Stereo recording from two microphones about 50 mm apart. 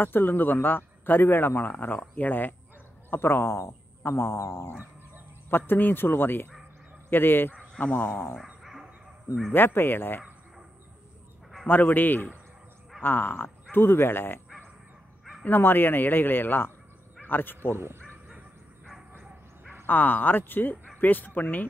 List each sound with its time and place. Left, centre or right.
0.0 s a man's voice: left
3.1 s speech: left
5.7 s a man's voice: left
9.5 s a man's voice: left
11.6 s a man's voice: left
15.4 s a man's voice: left
17.7 s speech: right
19.9 s speech: left